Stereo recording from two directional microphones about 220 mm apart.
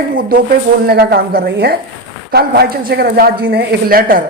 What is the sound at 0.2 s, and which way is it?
Speech, 40° right (ahead or behind).